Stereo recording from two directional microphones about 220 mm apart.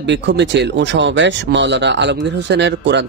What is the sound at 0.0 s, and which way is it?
Speech, 55° right (ahead or behind).